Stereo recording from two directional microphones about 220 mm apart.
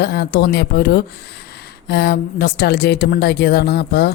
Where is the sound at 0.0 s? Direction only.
45° left (ahead or behind).